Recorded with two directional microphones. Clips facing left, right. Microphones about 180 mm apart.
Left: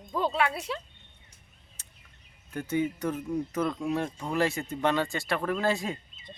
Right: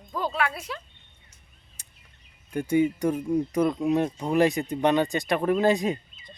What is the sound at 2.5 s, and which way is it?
Speech, 15° right (ahead or behind).